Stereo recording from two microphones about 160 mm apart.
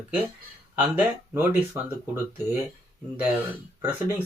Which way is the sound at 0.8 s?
10° right (ahead or behind).